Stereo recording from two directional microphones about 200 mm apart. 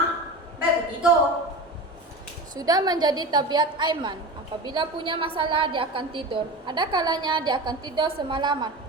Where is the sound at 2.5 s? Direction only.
20° right (ahead or behind).